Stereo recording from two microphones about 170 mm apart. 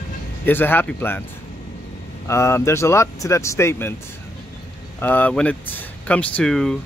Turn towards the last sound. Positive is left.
turn(degrees=5)  # may be behind; listen again after turning